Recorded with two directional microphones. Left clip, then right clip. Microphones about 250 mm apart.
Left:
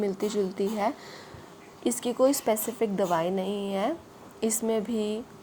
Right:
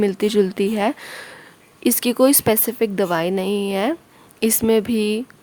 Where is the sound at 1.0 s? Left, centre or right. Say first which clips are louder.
Right 10 dB; right.